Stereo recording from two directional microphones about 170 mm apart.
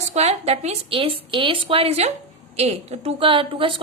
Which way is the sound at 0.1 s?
40° right (ahead or behind).